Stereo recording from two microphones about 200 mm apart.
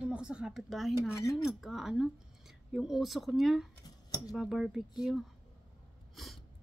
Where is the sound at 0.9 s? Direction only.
15° left (ahead or behind).